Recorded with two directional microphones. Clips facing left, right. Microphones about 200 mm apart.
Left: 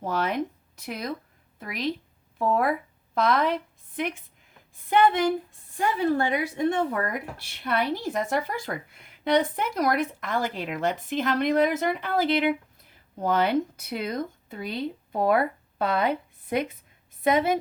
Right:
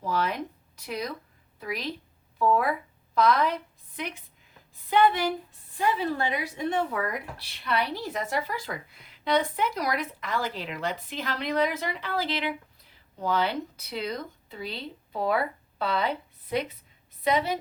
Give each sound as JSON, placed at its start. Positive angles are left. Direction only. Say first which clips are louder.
{"t": 0.0, "sound": "a woman's voice", "louder": "left 2 dB", "side_deg": 50}
{"t": 3.2, "sound": "speech", "louder": "even", "side_deg": 50}
{"t": 5.7, "sound": "a woman's voice", "louder": "left 3 dB", "side_deg": 50}